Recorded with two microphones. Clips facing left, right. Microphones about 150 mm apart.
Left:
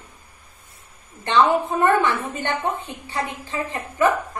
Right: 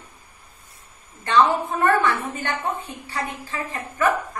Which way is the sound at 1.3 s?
20° left (ahead or behind).